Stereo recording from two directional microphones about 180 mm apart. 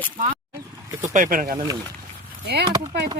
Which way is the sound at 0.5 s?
15° right (ahead or behind).